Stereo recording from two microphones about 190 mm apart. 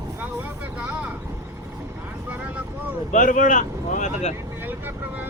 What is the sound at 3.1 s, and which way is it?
Speech, 45° left (ahead or behind).